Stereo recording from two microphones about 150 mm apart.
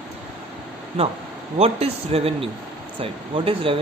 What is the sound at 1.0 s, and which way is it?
Speech, 40° right (ahead or behind).